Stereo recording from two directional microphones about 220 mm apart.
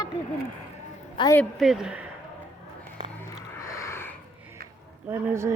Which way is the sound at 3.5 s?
15° left (ahead or behind).